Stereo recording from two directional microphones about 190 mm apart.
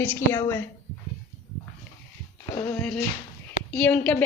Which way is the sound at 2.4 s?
10° left (ahead or behind).